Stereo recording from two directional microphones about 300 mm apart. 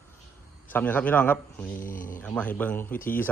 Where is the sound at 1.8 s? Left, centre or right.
Left.